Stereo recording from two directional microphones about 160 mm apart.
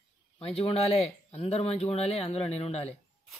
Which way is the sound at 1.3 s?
40° left (ahead or behind).